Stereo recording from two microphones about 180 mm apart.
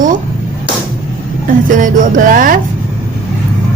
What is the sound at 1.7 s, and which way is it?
Speech, 50° right (ahead or behind).